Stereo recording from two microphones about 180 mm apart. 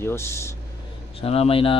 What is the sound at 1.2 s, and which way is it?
Speech, 35° left (ahead or behind).